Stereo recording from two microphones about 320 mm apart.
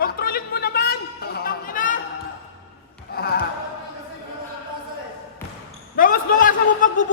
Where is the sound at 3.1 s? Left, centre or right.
Left.